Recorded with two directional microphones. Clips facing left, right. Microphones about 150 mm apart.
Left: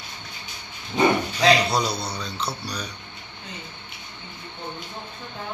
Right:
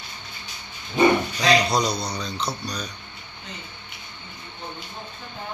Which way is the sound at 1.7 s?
5° left (ahead or behind).